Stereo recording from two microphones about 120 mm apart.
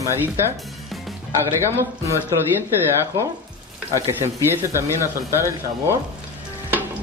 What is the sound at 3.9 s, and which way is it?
Speech, 25° right (ahead or behind).